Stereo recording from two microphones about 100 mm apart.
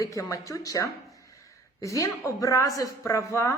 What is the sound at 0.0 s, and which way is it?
Speech, 30° left (ahead or behind).